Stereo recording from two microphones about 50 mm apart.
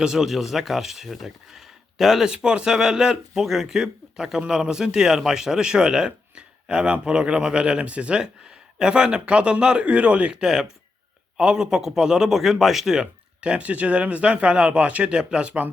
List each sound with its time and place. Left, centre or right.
0.0 s speech: centre
2.2 s speech: centre
10.4 s speech: centre
13.4 s speech: right